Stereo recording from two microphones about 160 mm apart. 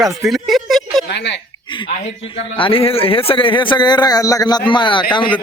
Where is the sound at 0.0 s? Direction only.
Centre (ahead or behind).